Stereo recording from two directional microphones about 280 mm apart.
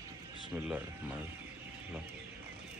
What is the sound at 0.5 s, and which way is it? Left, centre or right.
Speech, centre.